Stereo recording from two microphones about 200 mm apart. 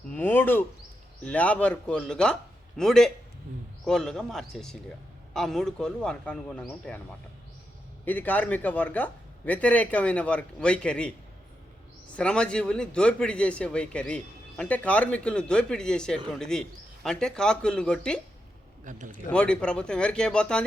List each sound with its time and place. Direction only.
0.1 s a man's voice: 10° left (ahead or behind)
8.0 s a man's voice: 10° left (ahead or behind)
12.1 s a man's voice: 5° left (ahead or behind)
18.9 s speech: 40° right (ahead or behind)
19.3 s a man's voice: 5° left (ahead or behind)